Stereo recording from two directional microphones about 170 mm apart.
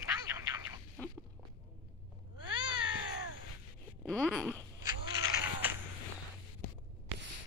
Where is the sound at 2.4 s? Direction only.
25° right (ahead or behind).